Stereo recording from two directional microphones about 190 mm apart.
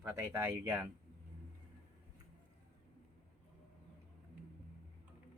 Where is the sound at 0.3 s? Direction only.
10° right (ahead or behind).